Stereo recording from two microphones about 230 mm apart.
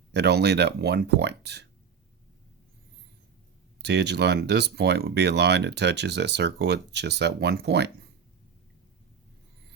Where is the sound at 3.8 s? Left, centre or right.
Right.